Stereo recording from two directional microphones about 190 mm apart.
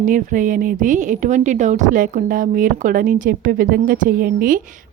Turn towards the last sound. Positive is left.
turn(degrees=-50)  # may be behind; listen again after turning